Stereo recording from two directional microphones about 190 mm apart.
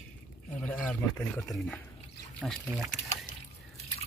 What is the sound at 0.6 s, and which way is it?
Speech, 5° left (ahead or behind).